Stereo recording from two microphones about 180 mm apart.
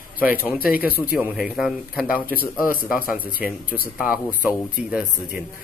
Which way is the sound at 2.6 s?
50° left (ahead or behind).